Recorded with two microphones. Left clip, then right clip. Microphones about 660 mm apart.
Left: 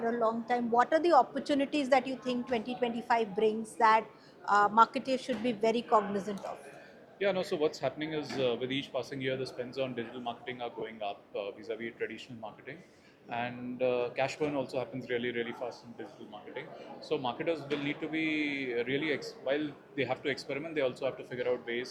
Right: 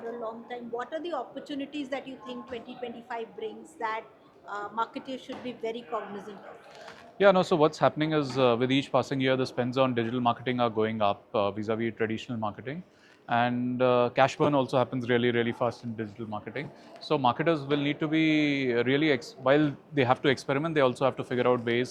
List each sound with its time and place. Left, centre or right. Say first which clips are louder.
0.2 s a woman's voice: left 7 dB; left
7.2 s speech: right 9 dB; right
17.1 s speech: right 8 dB; right